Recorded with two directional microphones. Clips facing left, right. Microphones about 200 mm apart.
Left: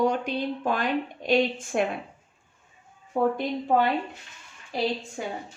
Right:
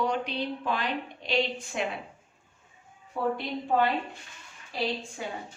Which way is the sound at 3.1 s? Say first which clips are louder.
Left 6 dB; 50° left (ahead or behind).